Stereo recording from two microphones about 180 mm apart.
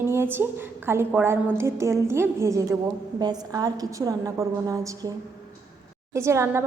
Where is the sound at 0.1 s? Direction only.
10° right (ahead or behind).